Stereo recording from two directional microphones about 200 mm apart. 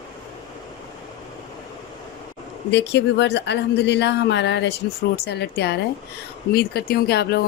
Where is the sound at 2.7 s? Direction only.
60° left (ahead or behind).